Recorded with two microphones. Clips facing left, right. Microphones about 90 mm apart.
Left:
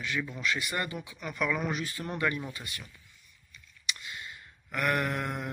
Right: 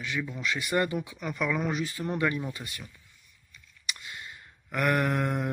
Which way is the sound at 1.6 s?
10° right (ahead or behind).